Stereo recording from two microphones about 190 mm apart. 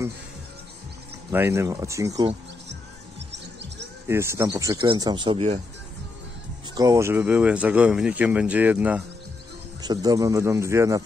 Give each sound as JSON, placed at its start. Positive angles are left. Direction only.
{"t": 1.3, "sound": "speech", "side_deg": -15}
{"t": 2.7, "sound": "music", "side_deg": -65}
{"t": 4.1, "sound": "speech", "side_deg": -15}
{"t": 6.7, "sound": "speech", "side_deg": -20}
{"t": 9.8, "sound": "speech", "side_deg": -20}